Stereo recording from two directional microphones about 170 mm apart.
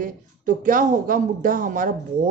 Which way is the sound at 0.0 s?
50° right (ahead or behind).